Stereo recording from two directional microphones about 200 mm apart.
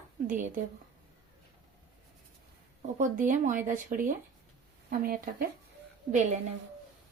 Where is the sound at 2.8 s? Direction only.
40° right (ahead or behind).